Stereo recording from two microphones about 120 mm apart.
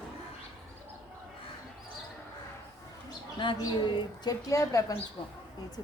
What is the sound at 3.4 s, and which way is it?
Speech, 40° left (ahead or behind).